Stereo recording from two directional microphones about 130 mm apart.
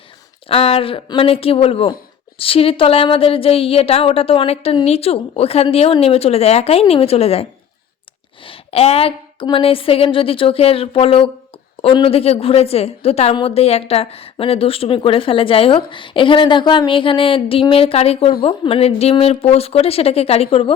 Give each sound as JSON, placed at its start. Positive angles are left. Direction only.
{"t": 0.4, "sound": "speech", "side_deg": 45}
{"t": 8.4, "sound": "speech", "side_deg": 50}